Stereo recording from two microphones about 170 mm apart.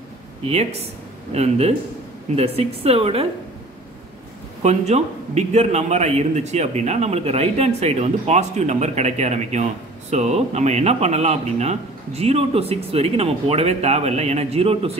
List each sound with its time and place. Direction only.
0.5 s a man's voice: 40° right (ahead or behind)
4.6 s a man's voice: 40° right (ahead or behind)